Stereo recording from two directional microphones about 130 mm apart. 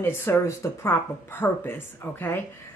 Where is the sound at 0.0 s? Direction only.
20° left (ahead or behind).